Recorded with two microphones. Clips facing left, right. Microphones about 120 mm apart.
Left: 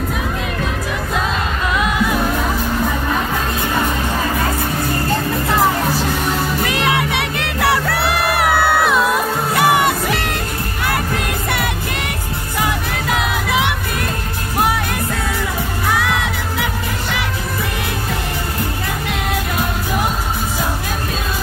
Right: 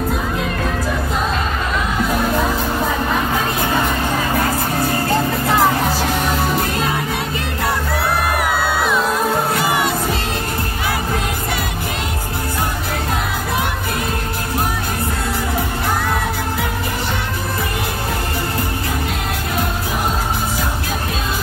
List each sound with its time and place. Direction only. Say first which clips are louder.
6.6 s music: left 2 dB; 75° left (ahead or behind)
13.1 s music: left 5 dB; 90° left
15.9 s music: left 3 dB; 90° left